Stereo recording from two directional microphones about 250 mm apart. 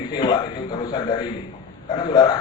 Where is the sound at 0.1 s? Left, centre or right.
Centre.